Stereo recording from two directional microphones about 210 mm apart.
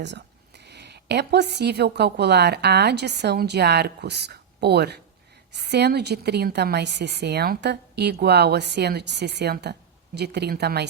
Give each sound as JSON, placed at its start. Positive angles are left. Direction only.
{"t": 0.0, "sound": "a woman's voice", "side_deg": -55}